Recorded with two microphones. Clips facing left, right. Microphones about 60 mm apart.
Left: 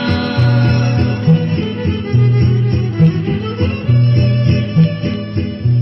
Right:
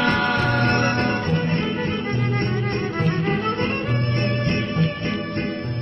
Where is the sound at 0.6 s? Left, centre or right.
Right.